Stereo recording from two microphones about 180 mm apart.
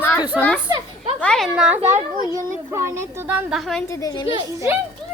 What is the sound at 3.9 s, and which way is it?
Speech, 20° left (ahead or behind).